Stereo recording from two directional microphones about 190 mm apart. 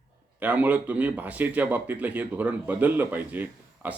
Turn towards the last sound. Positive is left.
turn(degrees=-10)  # may be behind; listen again after turning